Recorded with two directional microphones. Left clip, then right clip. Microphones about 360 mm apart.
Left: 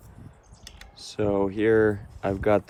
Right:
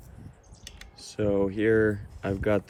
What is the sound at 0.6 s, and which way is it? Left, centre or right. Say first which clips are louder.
Typing: left 1 dB; centre.